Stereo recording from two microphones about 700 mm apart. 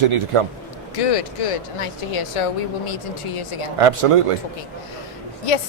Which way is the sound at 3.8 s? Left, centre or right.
Right.